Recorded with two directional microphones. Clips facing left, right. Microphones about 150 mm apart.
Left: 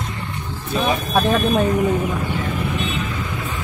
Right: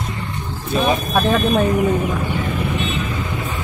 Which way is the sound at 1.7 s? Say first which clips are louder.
Right 1 dB; 10° right (ahead or behind).